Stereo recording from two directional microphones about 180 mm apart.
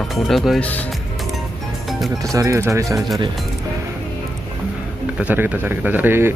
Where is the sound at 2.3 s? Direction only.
15° right (ahead or behind).